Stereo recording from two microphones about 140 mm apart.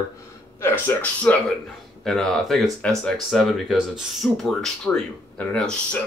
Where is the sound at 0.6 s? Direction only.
15° left (ahead or behind).